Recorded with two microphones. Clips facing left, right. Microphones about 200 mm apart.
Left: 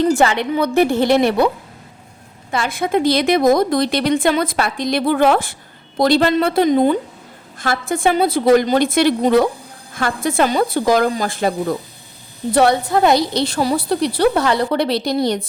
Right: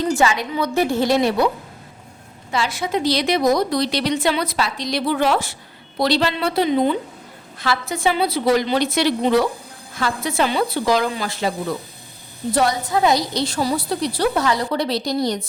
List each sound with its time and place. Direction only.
0.0 s a woman's voice: 60° left (ahead or behind)
2.5 s a woman's voice: 55° left (ahead or behind)
12.5 s a woman's voice: 60° left (ahead or behind)